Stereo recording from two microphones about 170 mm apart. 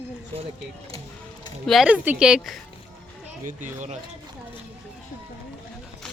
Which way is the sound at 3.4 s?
45° right (ahead or behind).